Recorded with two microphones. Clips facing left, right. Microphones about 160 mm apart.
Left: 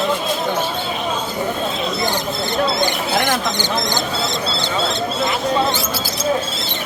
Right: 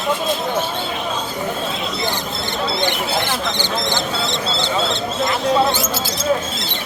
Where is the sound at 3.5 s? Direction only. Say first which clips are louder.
Left 1 dB; 40° left (ahead or behind).